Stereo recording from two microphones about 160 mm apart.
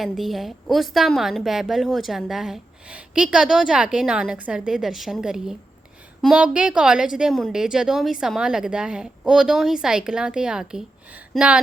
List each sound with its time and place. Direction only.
0.0 s a woman's voice: centre (ahead or behind)